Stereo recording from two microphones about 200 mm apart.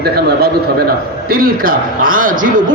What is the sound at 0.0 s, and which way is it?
A man's voice, 50° right (ahead or behind).